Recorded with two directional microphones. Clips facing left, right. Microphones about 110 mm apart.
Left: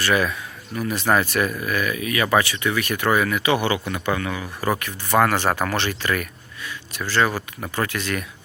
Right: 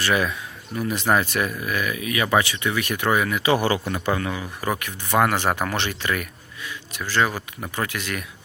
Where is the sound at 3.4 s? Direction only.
35° right (ahead or behind).